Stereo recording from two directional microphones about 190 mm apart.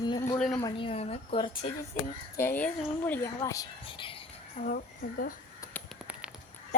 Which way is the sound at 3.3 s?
20° left (ahead or behind).